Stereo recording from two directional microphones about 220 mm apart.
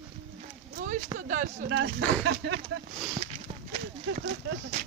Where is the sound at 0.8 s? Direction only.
35° right (ahead or behind).